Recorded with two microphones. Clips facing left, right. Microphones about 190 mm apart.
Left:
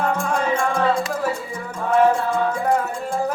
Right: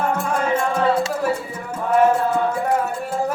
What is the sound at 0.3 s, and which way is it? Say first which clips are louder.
Music: right 2 dB; 5° right (ahead or behind).